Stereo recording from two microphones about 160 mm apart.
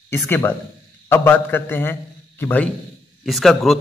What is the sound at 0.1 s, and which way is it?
A man's voice, 15° left (ahead or behind).